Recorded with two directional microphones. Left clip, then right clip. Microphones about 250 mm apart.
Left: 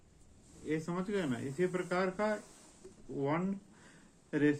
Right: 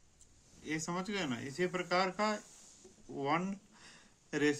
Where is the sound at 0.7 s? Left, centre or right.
Right.